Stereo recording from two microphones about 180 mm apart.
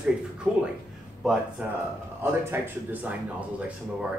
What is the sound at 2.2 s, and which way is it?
A man's voice, 15° right (ahead or behind).